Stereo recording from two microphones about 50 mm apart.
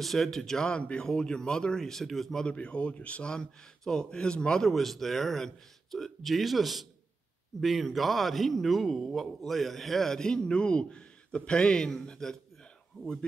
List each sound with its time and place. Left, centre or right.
0.0 s speech: centre
2.4 s speech: left
4.6 s a man's voice: centre